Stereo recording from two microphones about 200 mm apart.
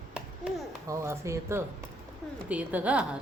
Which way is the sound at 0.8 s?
15° right (ahead or behind).